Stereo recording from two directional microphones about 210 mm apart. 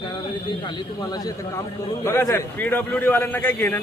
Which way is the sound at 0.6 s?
20° left (ahead or behind).